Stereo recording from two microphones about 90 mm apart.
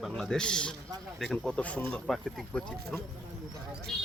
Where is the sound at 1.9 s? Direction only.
Centre (ahead or behind).